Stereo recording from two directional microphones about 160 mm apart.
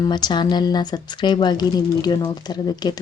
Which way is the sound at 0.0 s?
25° left (ahead or behind).